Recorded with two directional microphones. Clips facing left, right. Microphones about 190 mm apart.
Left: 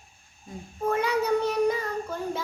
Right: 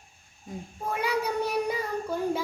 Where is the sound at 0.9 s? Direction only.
10° right (ahead or behind).